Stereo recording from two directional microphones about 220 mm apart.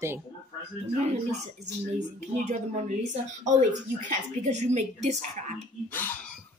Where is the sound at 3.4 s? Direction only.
35° right (ahead or behind).